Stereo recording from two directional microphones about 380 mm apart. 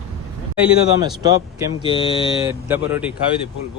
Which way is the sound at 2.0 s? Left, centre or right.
Centre.